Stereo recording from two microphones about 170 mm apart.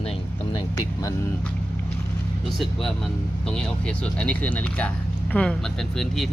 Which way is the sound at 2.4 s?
Centre (ahead or behind).